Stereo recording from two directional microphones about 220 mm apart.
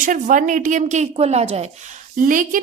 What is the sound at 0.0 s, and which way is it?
A woman's voice, 35° right (ahead or behind).